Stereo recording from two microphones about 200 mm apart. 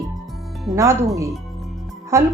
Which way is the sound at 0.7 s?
15° right (ahead or behind).